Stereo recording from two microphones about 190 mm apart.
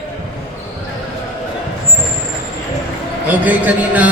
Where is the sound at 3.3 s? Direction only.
10° right (ahead or behind).